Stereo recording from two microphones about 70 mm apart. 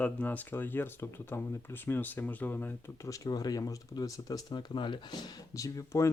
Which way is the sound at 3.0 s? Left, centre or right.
Left.